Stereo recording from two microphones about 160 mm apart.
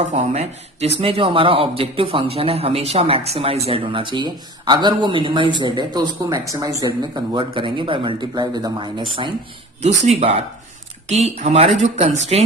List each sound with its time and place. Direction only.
0.1 s speech: 40° right (ahead or behind)
10.0 s speech: 40° right (ahead or behind)